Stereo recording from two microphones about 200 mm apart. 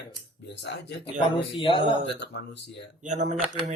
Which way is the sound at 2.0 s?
60° left (ahead or behind).